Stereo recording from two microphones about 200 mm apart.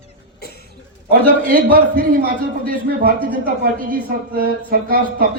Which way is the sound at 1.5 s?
45° right (ahead or behind).